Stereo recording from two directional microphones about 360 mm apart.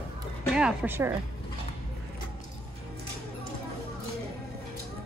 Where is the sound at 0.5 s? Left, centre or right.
Centre.